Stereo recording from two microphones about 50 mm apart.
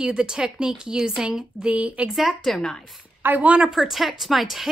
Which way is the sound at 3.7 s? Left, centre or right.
Centre.